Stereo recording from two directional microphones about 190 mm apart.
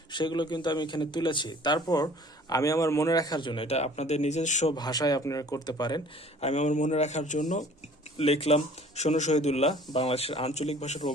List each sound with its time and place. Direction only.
0.1 s a man's voice: 25° left (ahead or behind)
4.7 s a man's voice: 20° left (ahead or behind)
6.4 s speech: 35° left (ahead or behind)